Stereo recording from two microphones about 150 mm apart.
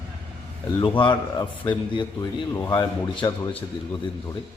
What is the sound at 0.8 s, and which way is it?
A man's voice, 35° left (ahead or behind).